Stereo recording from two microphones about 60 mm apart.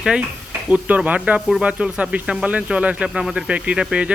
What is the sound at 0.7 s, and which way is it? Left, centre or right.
Speech, right.